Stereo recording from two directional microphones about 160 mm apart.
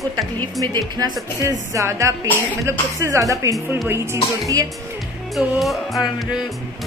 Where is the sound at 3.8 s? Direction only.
15° right (ahead or behind).